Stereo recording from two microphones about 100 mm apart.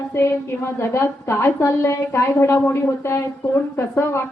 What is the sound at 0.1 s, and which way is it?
A woman's voice, 25° left (ahead or behind).